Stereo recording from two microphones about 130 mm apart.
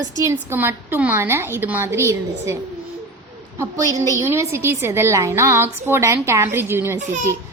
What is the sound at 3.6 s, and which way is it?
A woman's voice, 25° right (ahead or behind).